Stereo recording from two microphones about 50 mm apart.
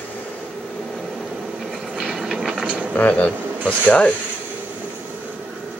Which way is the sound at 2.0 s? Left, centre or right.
Centre.